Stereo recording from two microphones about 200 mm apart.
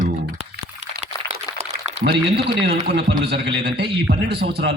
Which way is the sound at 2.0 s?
55° right (ahead or behind).